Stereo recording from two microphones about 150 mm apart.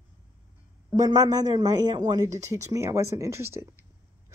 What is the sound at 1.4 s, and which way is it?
Speech, 25° right (ahead or behind).